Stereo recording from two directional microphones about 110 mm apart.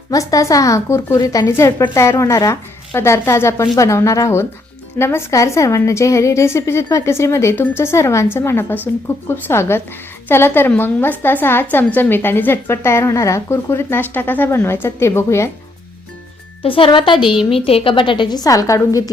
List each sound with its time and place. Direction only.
0.1 s a woman's voice: 35° left (ahead or behind)
16.6 s a woman's voice: 55° left (ahead or behind)
17.5 s a woman's voice: 60° left (ahead or behind); by 19.1 s 30° left (ahead or behind)